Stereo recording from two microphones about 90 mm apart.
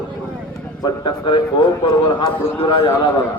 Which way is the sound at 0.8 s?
60° left (ahead or behind).